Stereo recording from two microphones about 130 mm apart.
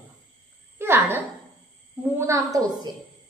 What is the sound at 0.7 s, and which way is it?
A woman's voice, 15° right (ahead or behind).